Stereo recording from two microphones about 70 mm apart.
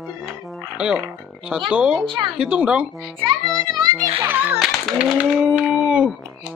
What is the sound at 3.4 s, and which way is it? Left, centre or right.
Music, right.